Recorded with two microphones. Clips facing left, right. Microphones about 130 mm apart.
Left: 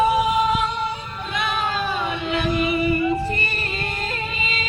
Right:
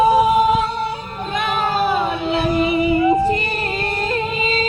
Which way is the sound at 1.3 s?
45° right (ahead or behind).